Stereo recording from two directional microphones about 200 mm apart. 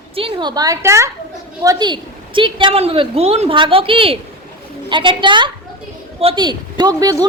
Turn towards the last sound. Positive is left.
turn(degrees=-20)  # may be behind; listen again after turning